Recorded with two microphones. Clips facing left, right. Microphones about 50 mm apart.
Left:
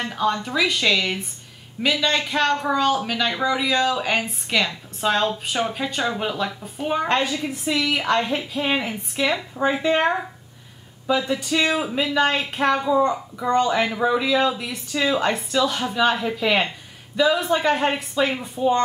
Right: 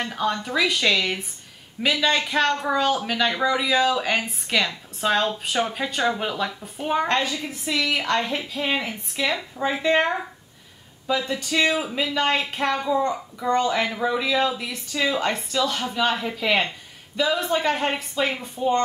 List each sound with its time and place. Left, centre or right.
0.0 s speech: centre
7.1 s a woman's voice: centre
11.1 s a woman's voice: centre